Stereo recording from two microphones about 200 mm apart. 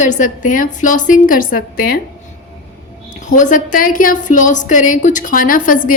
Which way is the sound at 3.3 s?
40° left (ahead or behind).